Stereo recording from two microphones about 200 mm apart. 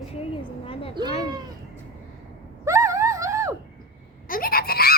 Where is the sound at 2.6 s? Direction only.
15° right (ahead or behind).